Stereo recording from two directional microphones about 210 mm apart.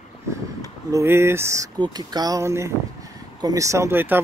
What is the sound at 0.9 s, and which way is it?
Speech, 10° right (ahead or behind).